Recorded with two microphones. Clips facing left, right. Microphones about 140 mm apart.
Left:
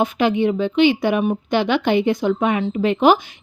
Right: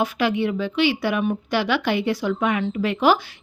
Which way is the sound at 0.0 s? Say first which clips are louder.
Left 4 dB; 20° left (ahead or behind).